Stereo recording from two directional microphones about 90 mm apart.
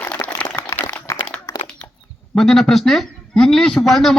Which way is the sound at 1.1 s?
35° left (ahead or behind).